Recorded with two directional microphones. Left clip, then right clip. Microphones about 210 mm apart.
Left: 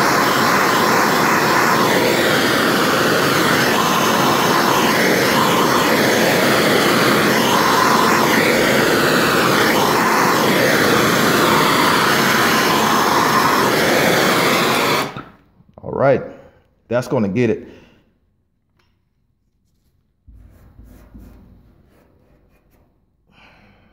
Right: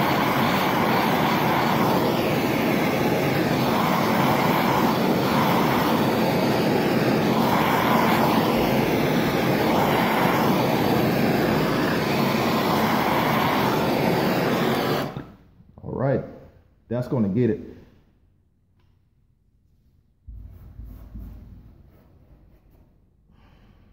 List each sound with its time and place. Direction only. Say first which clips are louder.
0.0 s vehicle: left 7 dB; 20° left (ahead or behind)
10.4 s vehicle: left 7 dB; 30° left (ahead or behind)
15.7 s a sound: left 8 dB; 55° left (ahead or behind)
17.1 s a man's voice: left 3 dB; 40° left (ahead or behind)